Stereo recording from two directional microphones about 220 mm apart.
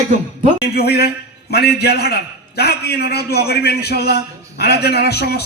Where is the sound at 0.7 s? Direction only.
45° left (ahead or behind).